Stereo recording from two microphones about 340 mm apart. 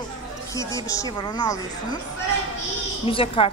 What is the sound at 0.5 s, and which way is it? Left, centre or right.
Speech, centre.